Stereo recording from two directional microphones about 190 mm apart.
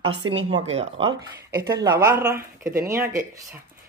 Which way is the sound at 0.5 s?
30° right (ahead or behind).